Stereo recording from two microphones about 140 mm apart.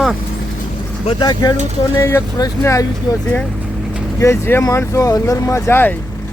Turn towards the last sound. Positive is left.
turn(degrees=15)  # may be behind; listen again after turning